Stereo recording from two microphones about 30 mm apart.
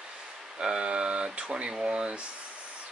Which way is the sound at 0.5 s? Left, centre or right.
Right.